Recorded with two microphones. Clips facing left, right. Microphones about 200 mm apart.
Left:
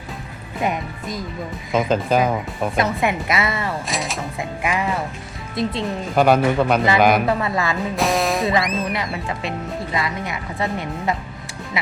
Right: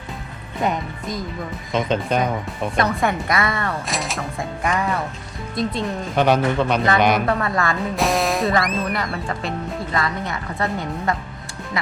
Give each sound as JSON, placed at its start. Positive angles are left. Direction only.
{"t": 0.6, "sound": "speech", "side_deg": 0}
{"t": 10.6, "sound": "speech", "side_deg": 0}